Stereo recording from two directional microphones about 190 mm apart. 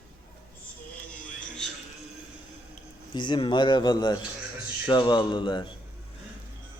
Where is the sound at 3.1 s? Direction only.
25° left (ahead or behind).